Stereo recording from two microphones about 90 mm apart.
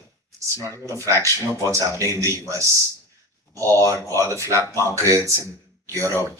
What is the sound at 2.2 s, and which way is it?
Speech, 35° right (ahead or behind).